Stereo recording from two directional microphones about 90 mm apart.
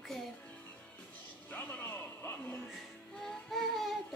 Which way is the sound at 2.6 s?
5° left (ahead or behind).